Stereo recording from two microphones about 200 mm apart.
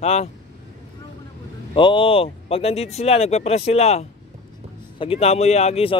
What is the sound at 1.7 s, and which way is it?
Speech, 25° left (ahead or behind).